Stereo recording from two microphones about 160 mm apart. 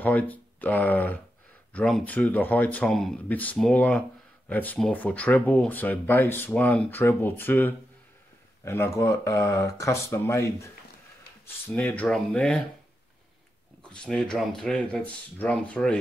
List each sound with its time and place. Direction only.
0.0 s speech: 10° left (ahead or behind)
13.8 s speech: 5° left (ahead or behind)